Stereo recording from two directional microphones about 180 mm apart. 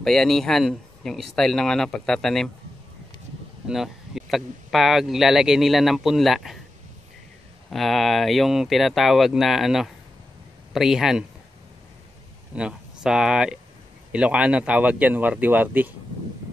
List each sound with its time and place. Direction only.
0.0 s speech: centre (ahead or behind)
3.6 s speech: centre (ahead or behind)
7.7 s speech: centre (ahead or behind)
12.5 s speech: 5° right (ahead or behind)